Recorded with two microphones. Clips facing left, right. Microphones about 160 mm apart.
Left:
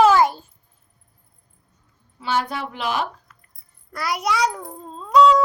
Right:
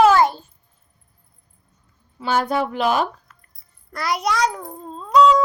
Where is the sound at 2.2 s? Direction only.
45° right (ahead or behind).